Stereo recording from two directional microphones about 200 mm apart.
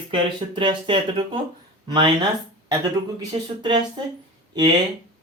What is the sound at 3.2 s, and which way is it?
Speech, 20° right (ahead or behind).